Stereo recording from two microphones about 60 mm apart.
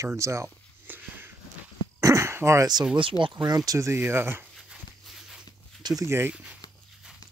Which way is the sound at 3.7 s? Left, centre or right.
Right.